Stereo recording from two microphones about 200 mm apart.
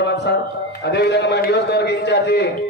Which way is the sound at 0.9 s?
55° left (ahead or behind).